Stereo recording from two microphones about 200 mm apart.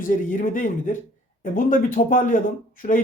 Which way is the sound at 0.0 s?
40° left (ahead or behind).